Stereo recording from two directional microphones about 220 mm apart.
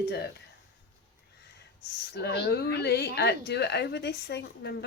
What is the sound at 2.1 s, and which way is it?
A woman's voice, 50° left (ahead or behind).